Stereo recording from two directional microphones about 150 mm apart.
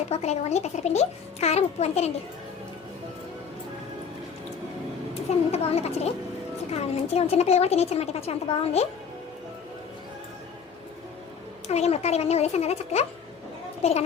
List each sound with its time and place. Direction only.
0.1 s a woman's voice: 45° left (ahead or behind)
5.5 s a woman's voice: 45° left (ahead or behind)
11.7 s a woman's voice: 45° left (ahead or behind)